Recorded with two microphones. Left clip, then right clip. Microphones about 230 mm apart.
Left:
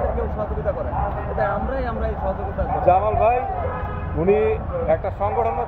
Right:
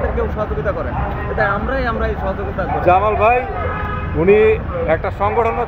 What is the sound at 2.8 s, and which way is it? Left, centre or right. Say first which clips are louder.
Speech: right 4 dB; right.